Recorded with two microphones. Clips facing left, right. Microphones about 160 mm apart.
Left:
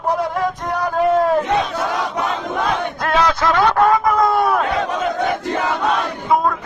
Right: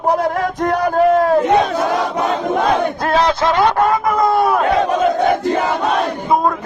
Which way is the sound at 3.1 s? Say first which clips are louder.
Right 1 dB; 30° right (ahead or behind).